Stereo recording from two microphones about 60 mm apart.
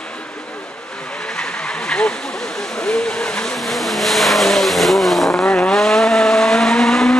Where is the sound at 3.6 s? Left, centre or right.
Centre.